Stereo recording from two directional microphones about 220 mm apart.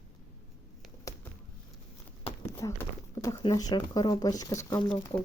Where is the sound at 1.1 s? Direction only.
15° left (ahead or behind).